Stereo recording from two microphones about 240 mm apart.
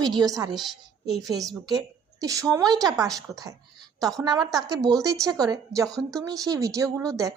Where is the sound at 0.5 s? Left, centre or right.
Centre.